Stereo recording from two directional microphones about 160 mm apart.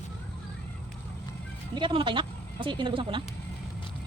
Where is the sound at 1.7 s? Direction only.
30° right (ahead or behind).